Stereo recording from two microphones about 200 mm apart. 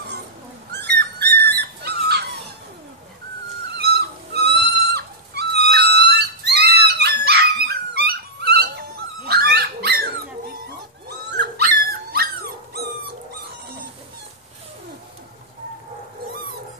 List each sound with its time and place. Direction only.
0.7 s dog: 55° right (ahead or behind)
3.7 s a sound: 55° right (ahead or behind)
11.1 s dog: 55° right (ahead or behind)